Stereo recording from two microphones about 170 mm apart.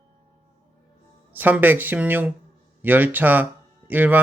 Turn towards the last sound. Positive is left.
turn(degrees=-10)  # may be behind; listen again after turning